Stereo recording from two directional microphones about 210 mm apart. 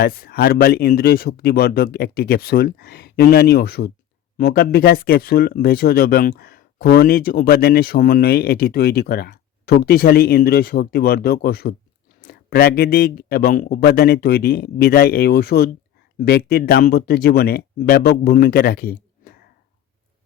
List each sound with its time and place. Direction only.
0.0 s speech: 45° left (ahead or behind)